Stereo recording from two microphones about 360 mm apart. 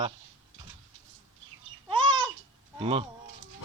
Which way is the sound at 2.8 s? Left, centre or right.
Centre.